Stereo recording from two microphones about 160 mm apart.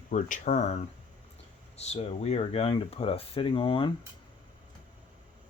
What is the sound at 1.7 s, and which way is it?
Speech, 40° left (ahead or behind).